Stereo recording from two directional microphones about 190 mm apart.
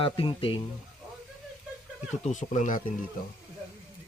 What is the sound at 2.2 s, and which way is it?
Speech, 40° left (ahead or behind).